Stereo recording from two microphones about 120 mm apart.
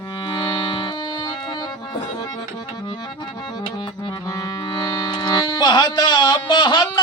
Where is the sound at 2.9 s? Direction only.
40° left (ahead or behind).